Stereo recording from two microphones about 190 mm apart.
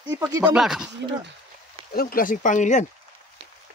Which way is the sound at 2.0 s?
50° left (ahead or behind).